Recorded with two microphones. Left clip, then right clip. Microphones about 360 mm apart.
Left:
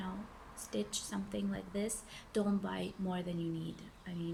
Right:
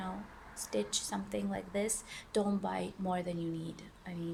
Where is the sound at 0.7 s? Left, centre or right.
Centre.